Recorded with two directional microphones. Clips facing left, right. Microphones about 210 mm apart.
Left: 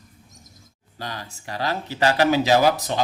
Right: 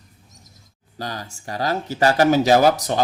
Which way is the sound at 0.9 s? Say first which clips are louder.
Right 3 dB; 40° right (ahead or behind).